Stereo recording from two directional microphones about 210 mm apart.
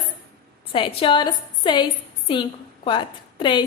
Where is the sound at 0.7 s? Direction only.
25° left (ahead or behind).